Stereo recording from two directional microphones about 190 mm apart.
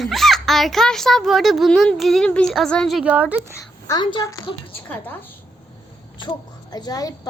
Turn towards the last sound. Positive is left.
turn(degrees=20)  # may be behind; listen again after turning